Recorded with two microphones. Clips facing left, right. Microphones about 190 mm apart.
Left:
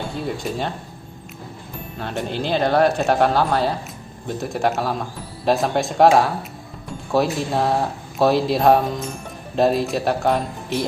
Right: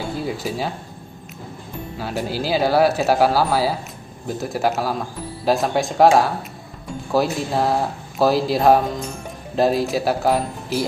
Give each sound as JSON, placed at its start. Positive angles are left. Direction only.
{"t": 0.2, "sound": "speech", "side_deg": -5}
{"t": 2.0, "sound": "speech", "side_deg": -5}